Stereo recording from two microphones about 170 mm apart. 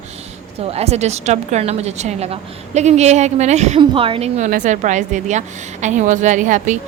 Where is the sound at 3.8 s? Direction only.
30° right (ahead or behind); by 6.8 s 45° right (ahead or behind).